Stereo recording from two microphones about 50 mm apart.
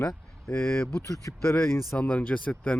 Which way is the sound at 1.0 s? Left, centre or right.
Left.